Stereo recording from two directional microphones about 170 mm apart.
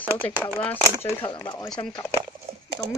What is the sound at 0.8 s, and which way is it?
Speech, 20° right (ahead or behind).